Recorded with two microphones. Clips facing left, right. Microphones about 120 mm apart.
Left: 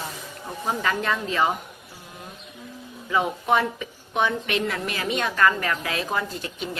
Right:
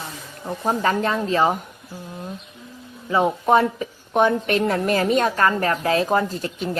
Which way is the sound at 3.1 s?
35° right (ahead or behind).